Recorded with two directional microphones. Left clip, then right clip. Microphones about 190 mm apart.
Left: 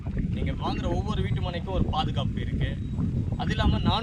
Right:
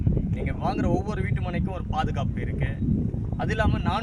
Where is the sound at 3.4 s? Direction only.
10° right (ahead or behind).